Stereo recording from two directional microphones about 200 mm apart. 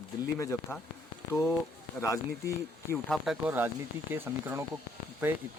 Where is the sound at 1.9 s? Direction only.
15° left (ahead or behind).